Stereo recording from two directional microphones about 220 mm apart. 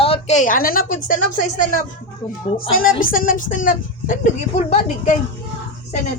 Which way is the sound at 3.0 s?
40° left (ahead or behind).